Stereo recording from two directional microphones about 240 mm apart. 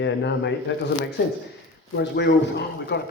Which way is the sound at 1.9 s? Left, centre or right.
Left.